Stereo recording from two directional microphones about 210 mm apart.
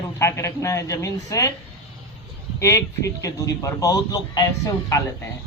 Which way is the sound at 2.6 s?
15° left (ahead or behind).